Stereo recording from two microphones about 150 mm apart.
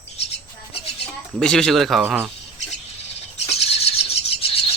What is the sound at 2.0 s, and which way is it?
Speech, 10° right (ahead or behind).